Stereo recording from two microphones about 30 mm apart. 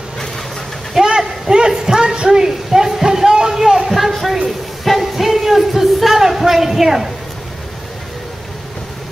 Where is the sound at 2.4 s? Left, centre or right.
Centre.